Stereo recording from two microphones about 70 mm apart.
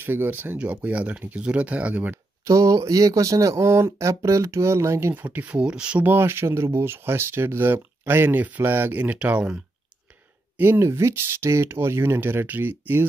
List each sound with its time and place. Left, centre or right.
0.0 s speech: right
2.4 s speech: right
5.1 s speech: right
6.0 s speech: right
10.6 s speech: right